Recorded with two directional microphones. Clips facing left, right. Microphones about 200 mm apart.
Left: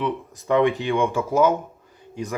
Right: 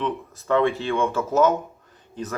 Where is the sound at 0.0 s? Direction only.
15° left (ahead or behind).